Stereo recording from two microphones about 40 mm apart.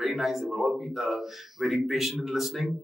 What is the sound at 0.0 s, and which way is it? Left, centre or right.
Speech, centre.